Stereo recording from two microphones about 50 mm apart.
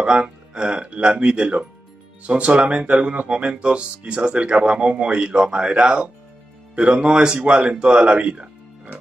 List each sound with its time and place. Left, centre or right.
0.0 s speech: centre